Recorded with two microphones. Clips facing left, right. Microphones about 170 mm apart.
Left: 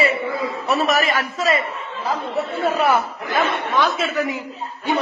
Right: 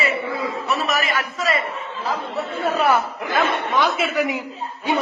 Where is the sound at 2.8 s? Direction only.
5° left (ahead or behind).